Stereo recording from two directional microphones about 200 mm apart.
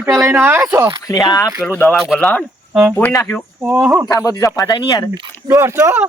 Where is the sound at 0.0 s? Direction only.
15° right (ahead or behind).